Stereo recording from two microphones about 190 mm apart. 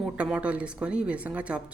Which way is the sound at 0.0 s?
5° right (ahead or behind).